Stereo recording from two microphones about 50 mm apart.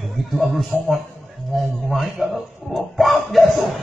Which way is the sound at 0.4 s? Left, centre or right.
Centre.